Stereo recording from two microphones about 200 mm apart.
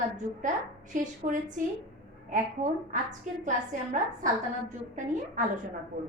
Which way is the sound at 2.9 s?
40° right (ahead or behind).